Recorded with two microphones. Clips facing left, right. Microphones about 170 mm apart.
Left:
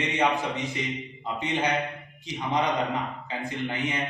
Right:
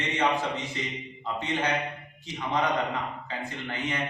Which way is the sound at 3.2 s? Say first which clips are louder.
Left 4 dB; 15° left (ahead or behind).